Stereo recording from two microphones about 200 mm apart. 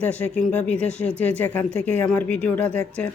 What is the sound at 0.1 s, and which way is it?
A woman's voice, 5° left (ahead or behind).